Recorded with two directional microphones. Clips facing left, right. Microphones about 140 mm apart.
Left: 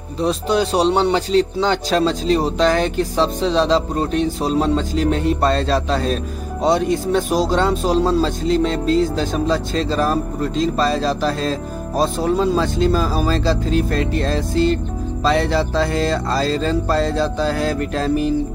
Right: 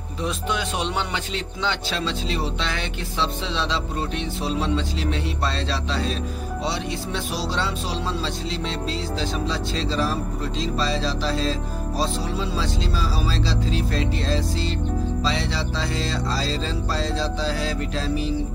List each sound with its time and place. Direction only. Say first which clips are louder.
0.2 s a man's voice: left 9 dB; 35° left (ahead or behind); by 18.3 s 55° left (ahead or behind)